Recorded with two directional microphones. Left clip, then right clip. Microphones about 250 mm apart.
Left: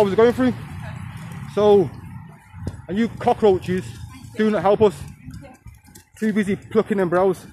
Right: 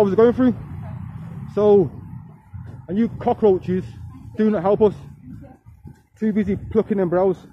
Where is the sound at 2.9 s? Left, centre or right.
Centre.